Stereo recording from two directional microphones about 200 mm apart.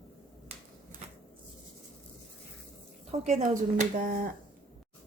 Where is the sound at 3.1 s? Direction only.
35° right (ahead or behind).